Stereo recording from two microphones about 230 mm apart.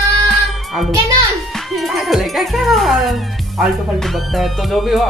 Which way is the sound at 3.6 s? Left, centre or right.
Centre.